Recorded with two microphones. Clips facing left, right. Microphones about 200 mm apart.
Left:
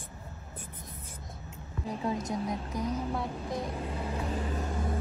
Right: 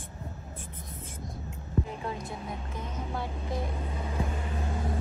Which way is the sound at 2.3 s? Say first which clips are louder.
Left 5 dB; 35° left (ahead or behind).